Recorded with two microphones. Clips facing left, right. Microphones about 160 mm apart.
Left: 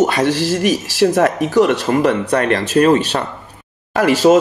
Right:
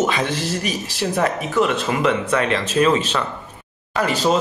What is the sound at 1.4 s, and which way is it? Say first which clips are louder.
Speech: left 6 dB; 75° left (ahead or behind).